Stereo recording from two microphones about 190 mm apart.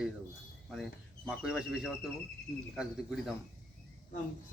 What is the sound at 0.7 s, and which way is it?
A man's voice, centre (ahead or behind).